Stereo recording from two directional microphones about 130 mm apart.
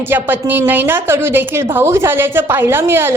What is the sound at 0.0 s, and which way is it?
A woman's voice, 15° right (ahead or behind).